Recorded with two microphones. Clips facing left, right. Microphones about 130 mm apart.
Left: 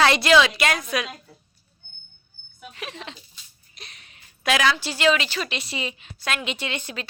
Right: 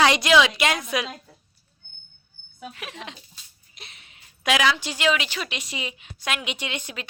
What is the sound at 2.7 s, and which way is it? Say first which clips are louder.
A woman's voice: left 1 dB; 10° right (ahead or behind).